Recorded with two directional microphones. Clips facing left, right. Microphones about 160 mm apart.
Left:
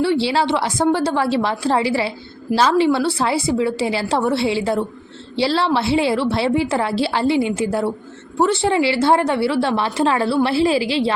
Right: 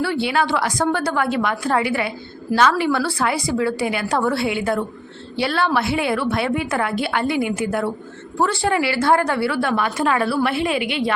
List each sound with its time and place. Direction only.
0.0 s a woman's voice: 30° left (ahead or behind)